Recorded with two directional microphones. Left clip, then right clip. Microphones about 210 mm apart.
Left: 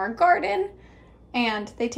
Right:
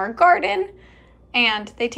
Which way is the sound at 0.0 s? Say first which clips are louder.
Right 4 dB; 10° left (ahead or behind).